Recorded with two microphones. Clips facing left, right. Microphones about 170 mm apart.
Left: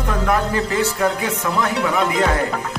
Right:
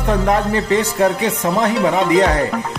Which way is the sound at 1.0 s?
35° right (ahead or behind).